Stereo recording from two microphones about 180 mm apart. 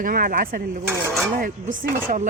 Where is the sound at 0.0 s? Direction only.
50° right (ahead or behind).